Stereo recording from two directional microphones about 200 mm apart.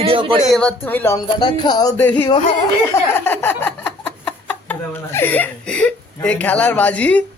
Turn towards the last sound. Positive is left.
turn(degrees=5)  # may be behind; listen again after turning